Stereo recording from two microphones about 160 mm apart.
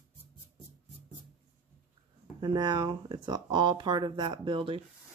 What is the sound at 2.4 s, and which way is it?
Speech, 30° right (ahead or behind).